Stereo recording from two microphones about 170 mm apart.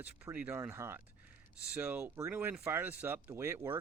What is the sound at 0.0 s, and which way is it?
Speech, 10° right (ahead or behind).